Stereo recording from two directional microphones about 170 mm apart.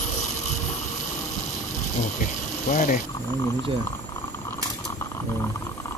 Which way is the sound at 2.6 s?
50° left (ahead or behind).